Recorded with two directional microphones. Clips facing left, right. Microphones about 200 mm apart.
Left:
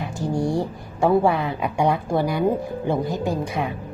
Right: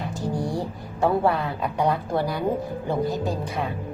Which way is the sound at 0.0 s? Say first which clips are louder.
Left 3 dB; 15° left (ahead or behind).